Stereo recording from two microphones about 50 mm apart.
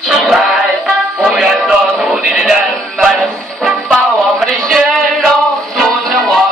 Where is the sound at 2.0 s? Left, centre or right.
Centre.